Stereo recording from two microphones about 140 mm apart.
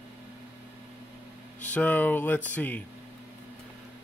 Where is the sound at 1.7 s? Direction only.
10° left (ahead or behind).